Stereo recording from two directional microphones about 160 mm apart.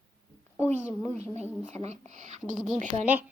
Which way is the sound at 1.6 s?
45° right (ahead or behind).